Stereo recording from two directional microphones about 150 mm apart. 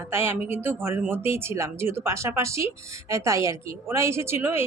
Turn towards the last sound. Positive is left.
turn(degrees=-15)  # may be behind; listen again after turning